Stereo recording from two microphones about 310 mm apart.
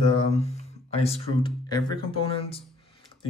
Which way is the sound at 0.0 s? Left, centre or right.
Centre.